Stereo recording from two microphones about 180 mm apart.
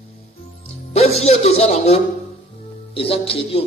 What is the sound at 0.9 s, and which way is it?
Speech, 35° left (ahead or behind).